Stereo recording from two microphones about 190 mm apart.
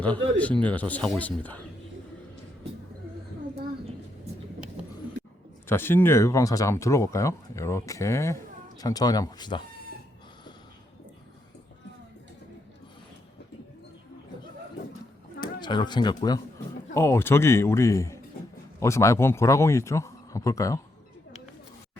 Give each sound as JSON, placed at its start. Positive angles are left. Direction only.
{"t": 0.0, "sound": "speech", "side_deg": 5}
{"t": 5.6, "sound": "speech", "side_deg": 10}
{"t": 15.4, "sound": "speech", "side_deg": 25}